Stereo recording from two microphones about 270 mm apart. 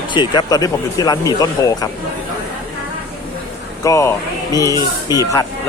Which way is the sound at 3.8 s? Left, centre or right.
Centre.